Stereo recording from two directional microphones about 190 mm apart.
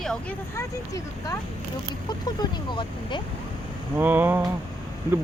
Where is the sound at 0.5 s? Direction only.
15° left (ahead or behind).